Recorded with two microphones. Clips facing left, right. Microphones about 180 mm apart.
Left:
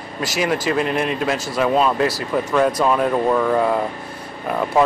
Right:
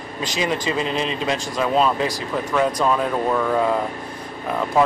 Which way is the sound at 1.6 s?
5° left (ahead or behind).